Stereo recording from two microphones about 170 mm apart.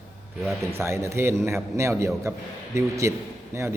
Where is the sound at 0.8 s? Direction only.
15° right (ahead or behind).